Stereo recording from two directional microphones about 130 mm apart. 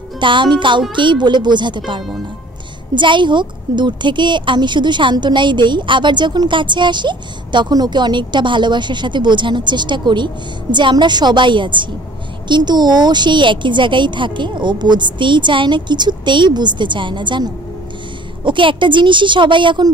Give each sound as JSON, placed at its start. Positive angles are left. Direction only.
{"t": 0.2, "sound": "a woman's voice", "side_deg": -40}
{"t": 2.9, "sound": "a woman's voice", "side_deg": -40}